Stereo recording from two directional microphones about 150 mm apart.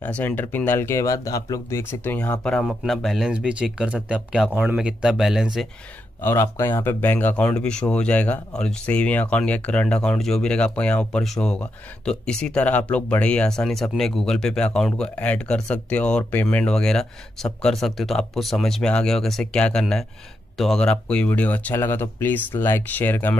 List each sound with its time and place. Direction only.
0.0 s speech: 10° left (ahead or behind)
2.4 s speech: centre (ahead or behind)
6.2 s speech: 20° left (ahead or behind)